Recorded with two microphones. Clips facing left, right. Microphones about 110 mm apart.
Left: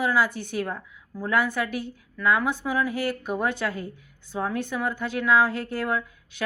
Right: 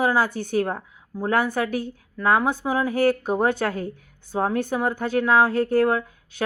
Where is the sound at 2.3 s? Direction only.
45° right (ahead or behind).